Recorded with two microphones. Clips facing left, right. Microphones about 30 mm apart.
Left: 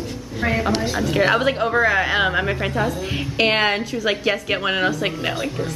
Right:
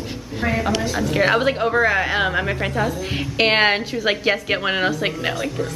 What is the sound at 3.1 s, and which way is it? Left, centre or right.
A woman's voice, centre.